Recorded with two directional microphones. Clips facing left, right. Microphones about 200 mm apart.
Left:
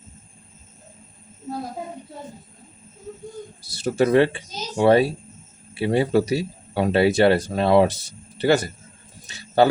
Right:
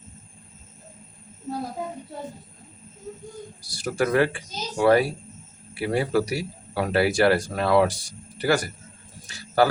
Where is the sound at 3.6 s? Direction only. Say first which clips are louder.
Left 5 dB; 25° left (ahead or behind).